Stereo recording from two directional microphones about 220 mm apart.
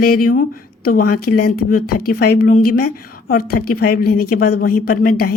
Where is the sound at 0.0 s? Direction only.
40° left (ahead or behind).